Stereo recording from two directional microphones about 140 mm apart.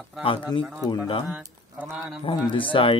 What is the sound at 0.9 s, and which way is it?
Speech, 40° left (ahead or behind).